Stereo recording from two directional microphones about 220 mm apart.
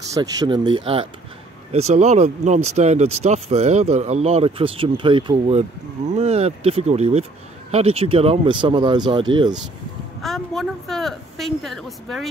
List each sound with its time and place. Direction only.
0.1 s speech: 20° right (ahead or behind)
10.2 s a woman's voice: centre (ahead or behind)